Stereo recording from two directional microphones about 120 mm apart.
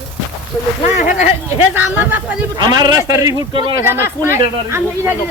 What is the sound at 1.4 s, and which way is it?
Speech, 20° right (ahead or behind).